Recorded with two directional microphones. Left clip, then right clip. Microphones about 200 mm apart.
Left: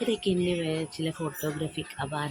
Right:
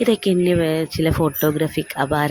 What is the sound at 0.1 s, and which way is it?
Speech, 40° right (ahead or behind).